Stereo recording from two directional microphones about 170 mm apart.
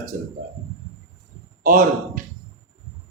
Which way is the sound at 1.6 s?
50° right (ahead or behind).